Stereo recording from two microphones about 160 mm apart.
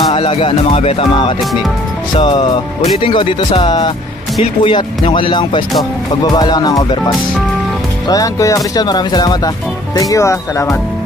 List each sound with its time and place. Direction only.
0.1 s speech: 35° left (ahead or behind); by 10.8 s 15° left (ahead or behind)